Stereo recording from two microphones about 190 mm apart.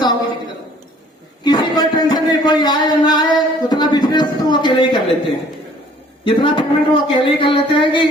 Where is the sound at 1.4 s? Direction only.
20° left (ahead or behind).